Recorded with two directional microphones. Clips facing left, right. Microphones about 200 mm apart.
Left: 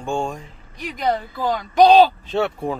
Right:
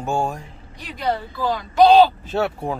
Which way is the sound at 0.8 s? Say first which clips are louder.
Left 2 dB; 15° left (ahead or behind).